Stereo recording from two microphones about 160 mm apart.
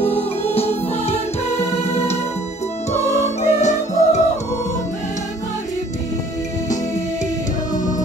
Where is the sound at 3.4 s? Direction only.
45° left (ahead or behind).